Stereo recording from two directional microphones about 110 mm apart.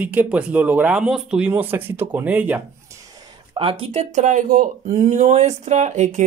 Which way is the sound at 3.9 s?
90° right.